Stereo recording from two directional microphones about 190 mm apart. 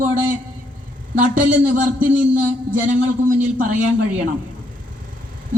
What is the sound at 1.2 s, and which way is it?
Speech, 45° right (ahead or behind).